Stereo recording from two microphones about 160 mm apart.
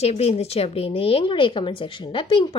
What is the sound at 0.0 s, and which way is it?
A woman's voice, 40° left (ahead or behind).